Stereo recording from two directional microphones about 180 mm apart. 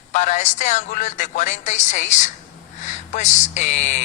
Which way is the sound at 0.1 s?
45° left (ahead or behind).